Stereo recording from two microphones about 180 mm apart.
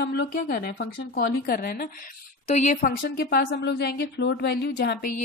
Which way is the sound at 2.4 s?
40° left (ahead or behind).